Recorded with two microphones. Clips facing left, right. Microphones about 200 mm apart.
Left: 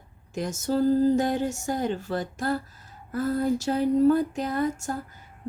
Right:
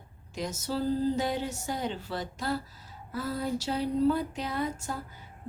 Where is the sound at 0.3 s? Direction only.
50° left (ahead or behind).